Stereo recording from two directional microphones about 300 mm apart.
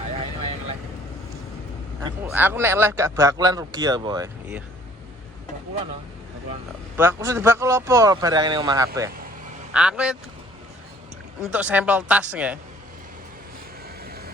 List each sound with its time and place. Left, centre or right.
2.0 s speech: centre
6.9 s speech: centre
11.5 s speech: centre
14.0 s vehicle: right